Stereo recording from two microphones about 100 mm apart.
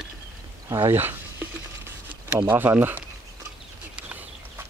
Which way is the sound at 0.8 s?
20° right (ahead or behind).